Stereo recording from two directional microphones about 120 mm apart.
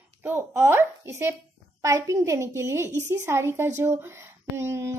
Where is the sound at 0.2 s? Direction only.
20° right (ahead or behind).